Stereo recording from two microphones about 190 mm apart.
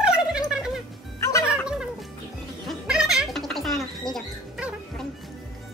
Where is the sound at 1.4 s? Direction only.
5° right (ahead or behind).